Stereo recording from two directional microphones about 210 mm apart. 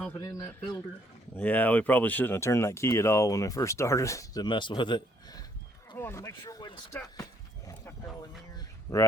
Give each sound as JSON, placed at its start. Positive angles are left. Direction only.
{"t": 0.2, "sound": "speech", "side_deg": 15}
{"t": 1.4, "sound": "speech", "side_deg": 5}
{"t": 8.5, "sound": "a sound", "side_deg": 15}